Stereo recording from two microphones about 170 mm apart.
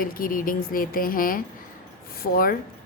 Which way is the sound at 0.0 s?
55° left (ahead or behind).